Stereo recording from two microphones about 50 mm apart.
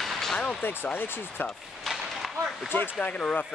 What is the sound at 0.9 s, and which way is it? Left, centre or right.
Speech, left.